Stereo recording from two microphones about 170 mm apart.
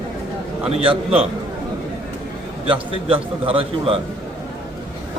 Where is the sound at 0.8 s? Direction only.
35° right (ahead or behind).